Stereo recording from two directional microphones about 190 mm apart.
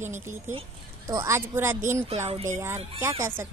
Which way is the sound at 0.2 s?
10° right (ahead or behind).